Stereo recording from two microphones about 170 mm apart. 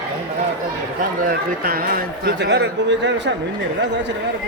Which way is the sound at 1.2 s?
60° right (ahead or behind).